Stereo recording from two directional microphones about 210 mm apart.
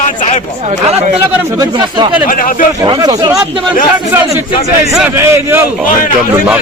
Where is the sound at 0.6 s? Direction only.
30° right (ahead or behind).